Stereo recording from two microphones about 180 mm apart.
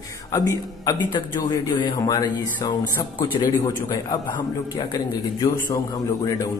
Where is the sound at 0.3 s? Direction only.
20° left (ahead or behind).